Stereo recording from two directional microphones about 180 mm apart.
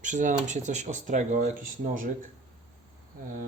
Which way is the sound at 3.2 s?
55° right (ahead or behind).